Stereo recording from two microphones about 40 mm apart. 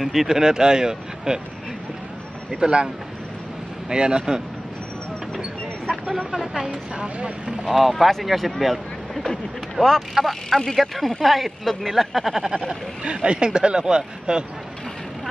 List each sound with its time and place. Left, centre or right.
0.0 s speech: centre
2.5 s speech: right
3.9 s speech: centre
6.3 s speech: centre
6.7 s speech: right
7.6 s speech: centre
13.0 s speech: right